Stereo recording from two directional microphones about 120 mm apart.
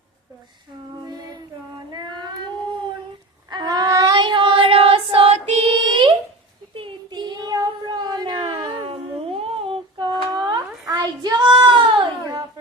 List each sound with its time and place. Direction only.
1.9 s child singing: 40° right (ahead or behind)
3.5 s child singing: 35° right (ahead or behind)